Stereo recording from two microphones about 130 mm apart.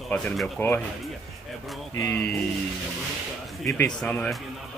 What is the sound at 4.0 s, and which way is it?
Speech, 5° left (ahead or behind).